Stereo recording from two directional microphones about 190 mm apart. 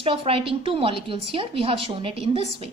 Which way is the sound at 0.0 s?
30° right (ahead or behind).